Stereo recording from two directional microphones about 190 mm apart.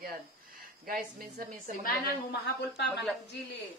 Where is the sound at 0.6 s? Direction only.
50° right (ahead or behind).